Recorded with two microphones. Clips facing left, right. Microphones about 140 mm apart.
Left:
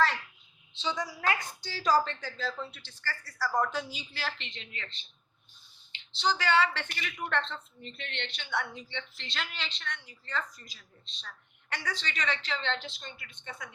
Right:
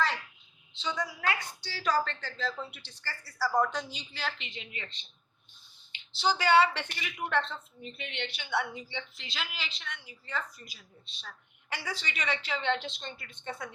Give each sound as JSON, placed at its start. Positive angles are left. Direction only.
{"t": 1.2, "sound": "a woman's voice", "side_deg": 35}
{"t": 2.4, "sound": "speech", "side_deg": 0}
{"t": 2.6, "sound": "a woman's voice", "side_deg": -15}
{"t": 13.1, "sound": "speech", "side_deg": -35}